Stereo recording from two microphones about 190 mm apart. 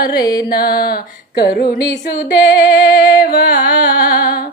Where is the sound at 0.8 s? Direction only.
55° left (ahead or behind).